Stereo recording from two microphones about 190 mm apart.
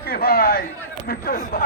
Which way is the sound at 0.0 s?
55° left (ahead or behind).